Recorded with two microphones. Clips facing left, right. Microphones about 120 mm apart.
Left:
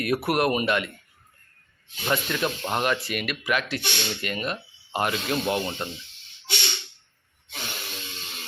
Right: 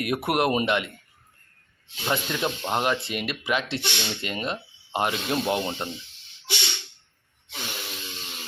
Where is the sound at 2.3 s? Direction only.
15° right (ahead or behind).